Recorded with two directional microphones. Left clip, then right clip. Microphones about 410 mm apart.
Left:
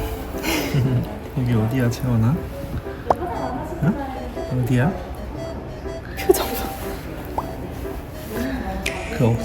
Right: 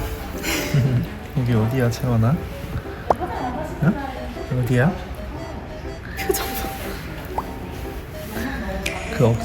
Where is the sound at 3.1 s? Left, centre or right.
Centre.